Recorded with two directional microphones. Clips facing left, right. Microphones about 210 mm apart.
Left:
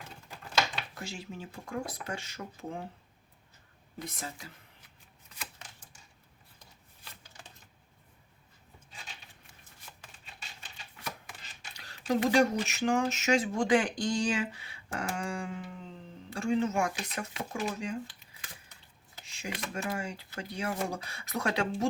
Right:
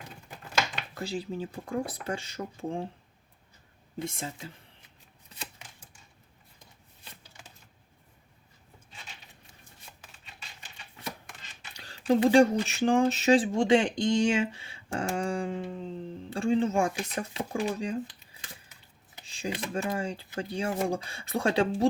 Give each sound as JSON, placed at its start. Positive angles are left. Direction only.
{"t": 0.9, "sound": "speech", "side_deg": -35}
{"t": 3.9, "sound": "speech", "side_deg": -25}
{"t": 11.8, "sound": "speech", "side_deg": -30}
{"t": 19.2, "sound": "speech", "side_deg": -30}